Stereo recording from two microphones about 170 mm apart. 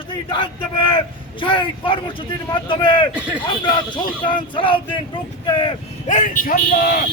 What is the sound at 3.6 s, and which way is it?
Speech, 25° left (ahead or behind).